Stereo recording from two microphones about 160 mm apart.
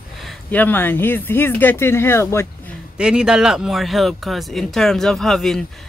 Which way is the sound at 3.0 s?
5° right (ahead or behind).